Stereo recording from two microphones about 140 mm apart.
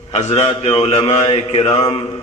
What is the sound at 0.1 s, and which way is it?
Speech, 55° left (ahead or behind).